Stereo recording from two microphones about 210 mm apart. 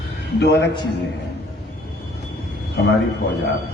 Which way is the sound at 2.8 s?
50° left (ahead or behind).